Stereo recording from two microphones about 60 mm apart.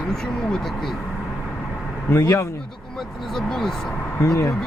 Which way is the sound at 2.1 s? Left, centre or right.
Left.